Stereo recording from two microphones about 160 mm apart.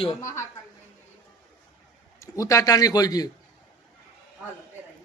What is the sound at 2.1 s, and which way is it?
A man's voice, 20° left (ahead or behind).